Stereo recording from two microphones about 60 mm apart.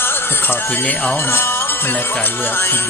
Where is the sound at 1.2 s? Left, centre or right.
Left.